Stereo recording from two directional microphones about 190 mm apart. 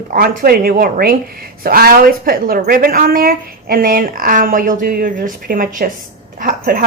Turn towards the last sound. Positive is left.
turn(degrees=-45)  # may be behind; listen again after turning